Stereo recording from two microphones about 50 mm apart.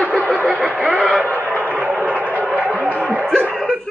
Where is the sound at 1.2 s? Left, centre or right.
Right.